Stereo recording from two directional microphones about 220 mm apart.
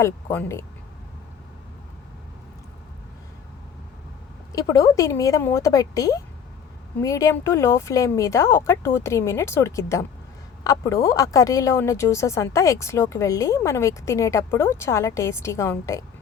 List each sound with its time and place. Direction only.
0.0 s speech: 10° left (ahead or behind)
4.5 s speech: 15° left (ahead or behind)